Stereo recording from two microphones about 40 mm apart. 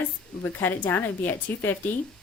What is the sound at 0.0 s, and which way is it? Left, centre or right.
A woman's voice, left.